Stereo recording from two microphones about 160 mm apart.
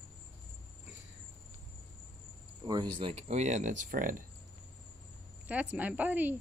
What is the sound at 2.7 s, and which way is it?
Speech, 25° right (ahead or behind).